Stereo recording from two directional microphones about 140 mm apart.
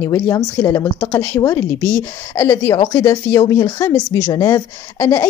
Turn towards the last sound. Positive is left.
turn(degrees=20)  # may be behind; listen again after turning